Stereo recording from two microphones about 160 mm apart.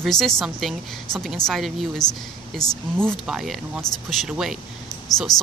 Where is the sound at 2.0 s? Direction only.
25° left (ahead or behind).